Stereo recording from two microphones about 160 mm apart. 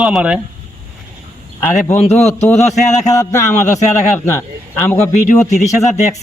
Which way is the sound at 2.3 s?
15° left (ahead or behind).